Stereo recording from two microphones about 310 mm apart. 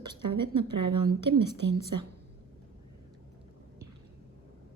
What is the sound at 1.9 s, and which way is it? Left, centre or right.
Speech, right.